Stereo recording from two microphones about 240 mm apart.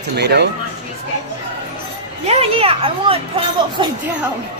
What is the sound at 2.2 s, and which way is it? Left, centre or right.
A child's voice, right.